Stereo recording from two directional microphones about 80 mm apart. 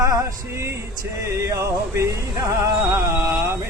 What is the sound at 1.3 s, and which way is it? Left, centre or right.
Music, right.